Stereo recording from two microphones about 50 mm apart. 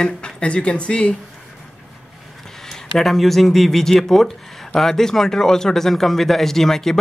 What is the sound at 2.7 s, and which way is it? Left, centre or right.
Speech, centre.